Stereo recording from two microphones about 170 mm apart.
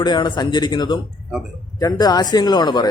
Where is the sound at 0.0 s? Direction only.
25° left (ahead or behind).